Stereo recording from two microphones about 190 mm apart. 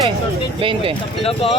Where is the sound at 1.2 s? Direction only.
30° left (ahead or behind).